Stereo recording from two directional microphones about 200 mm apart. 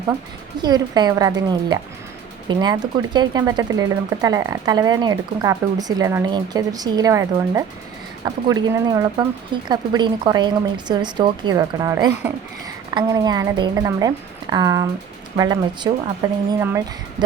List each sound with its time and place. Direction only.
0.6 s speech: 20° right (ahead or behind)